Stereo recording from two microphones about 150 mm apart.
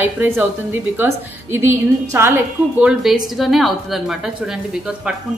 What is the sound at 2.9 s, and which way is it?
A woman's voice, centre (ahead or behind).